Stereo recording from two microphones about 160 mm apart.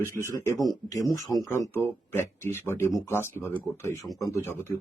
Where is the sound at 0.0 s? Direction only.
15° right (ahead or behind).